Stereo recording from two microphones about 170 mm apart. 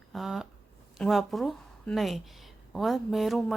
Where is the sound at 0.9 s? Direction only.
Centre (ahead or behind).